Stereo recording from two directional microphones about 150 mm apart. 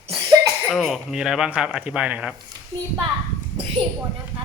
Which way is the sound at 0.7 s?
Centre (ahead or behind).